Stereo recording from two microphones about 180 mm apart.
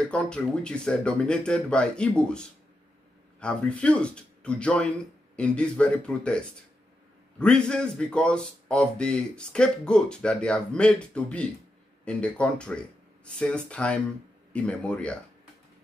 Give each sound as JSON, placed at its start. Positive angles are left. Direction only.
{"t": 0.0, "sound": "a man's voice", "side_deg": 5}